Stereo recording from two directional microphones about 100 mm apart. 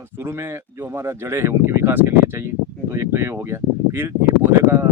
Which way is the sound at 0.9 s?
25° right (ahead or behind).